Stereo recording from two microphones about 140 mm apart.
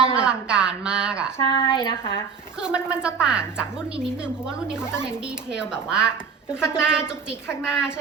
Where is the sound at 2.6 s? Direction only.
5° right (ahead or behind).